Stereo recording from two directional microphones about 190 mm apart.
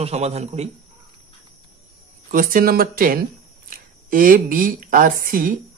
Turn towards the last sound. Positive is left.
turn(degrees=-45)  # may be behind; listen again after turning